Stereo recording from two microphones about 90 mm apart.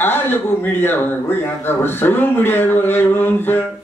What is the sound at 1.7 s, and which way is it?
A man's voice, 25° left (ahead or behind).